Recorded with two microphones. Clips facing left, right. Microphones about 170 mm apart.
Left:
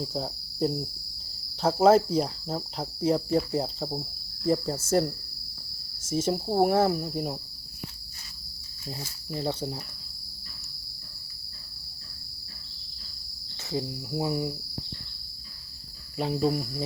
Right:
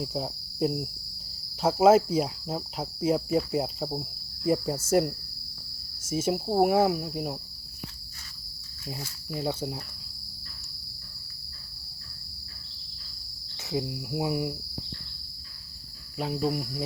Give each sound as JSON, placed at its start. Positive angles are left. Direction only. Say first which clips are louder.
{"t": 0.0, "sound": "cricket", "louder": "even", "side_deg": -10}
{"t": 6.1, "sound": "speech", "louder": "even", "side_deg": -10}
{"t": 9.0, "sound": "cricket", "louder": "even", "side_deg": -5}
{"t": 13.7, "sound": "cricket", "louder": "right 1 dB", "side_deg": -10}
{"t": 16.1, "sound": "speech", "louder": "left 2 dB", "side_deg": 0}